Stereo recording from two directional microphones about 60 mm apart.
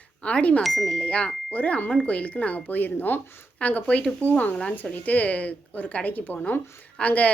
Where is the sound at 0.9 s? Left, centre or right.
Centre.